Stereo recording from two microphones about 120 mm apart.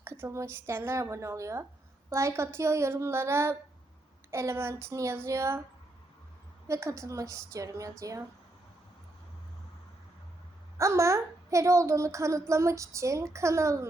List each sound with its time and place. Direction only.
0.0 s a woman's voice: 20° right (ahead or behind)
6.7 s a woman's voice: 25° right (ahead or behind)
10.8 s a woman's voice: 25° right (ahead or behind)